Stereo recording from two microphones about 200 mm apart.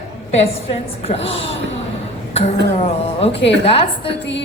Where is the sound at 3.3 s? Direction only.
60° left (ahead or behind).